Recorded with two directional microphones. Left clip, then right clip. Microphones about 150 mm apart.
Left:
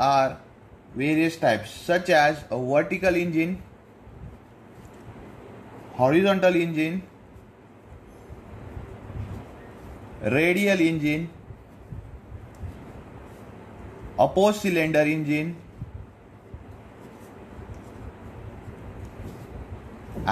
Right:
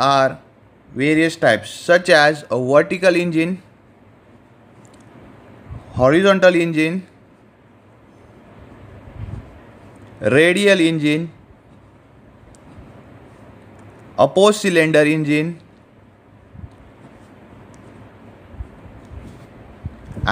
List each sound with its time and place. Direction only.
0.0 s speech: 55° right (ahead or behind)
5.9 s speech: 65° right (ahead or behind)
10.2 s speech: 60° right (ahead or behind)
14.1 s speech: 65° right (ahead or behind)